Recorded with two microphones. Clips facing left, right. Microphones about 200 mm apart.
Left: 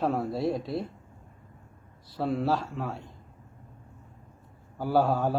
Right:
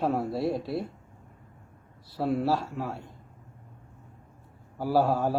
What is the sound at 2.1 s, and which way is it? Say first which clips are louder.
Speech: right 1 dB; 5° right (ahead or behind).